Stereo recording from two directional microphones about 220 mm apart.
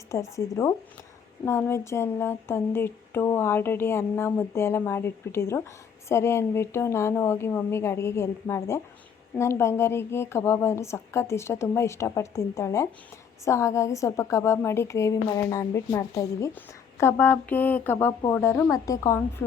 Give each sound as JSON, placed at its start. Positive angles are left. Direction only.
{"t": 0.1, "sound": "a woman's voice", "side_deg": 15}